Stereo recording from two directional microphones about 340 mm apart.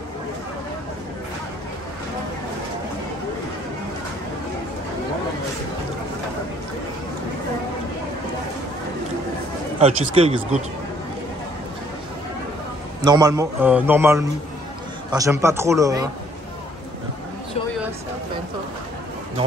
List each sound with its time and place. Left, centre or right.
9.8 s a man's voice: centre
13.0 s a man's voice: centre